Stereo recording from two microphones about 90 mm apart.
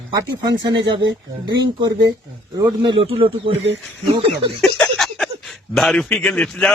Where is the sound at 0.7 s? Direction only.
65° right (ahead or behind).